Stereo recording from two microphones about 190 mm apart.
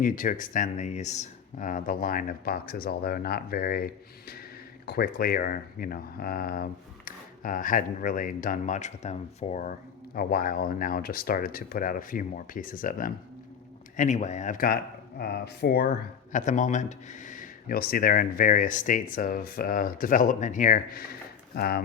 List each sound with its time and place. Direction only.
0.0 s speech: 45° left (ahead or behind)
4.9 s speech: 55° left (ahead or behind)
16.3 s speech: 40° left (ahead or behind)